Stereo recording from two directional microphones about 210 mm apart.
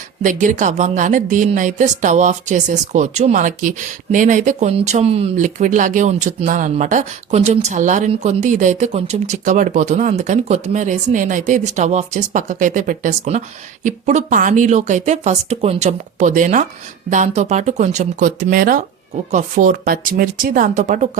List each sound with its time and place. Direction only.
0.2 s a woman's voice: 35° right (ahead or behind)